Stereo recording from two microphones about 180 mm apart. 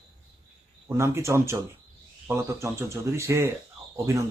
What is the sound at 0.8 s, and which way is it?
Speech, 15° right (ahead or behind).